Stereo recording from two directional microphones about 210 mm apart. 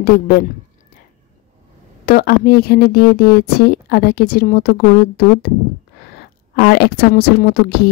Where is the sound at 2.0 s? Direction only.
45° left (ahead or behind).